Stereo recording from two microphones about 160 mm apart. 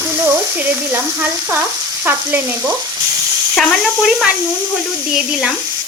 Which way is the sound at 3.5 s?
Centre (ahead or behind).